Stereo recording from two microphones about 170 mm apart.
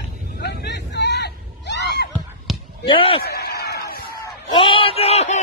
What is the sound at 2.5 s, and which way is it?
Basketball bounce, centre (ahead or behind).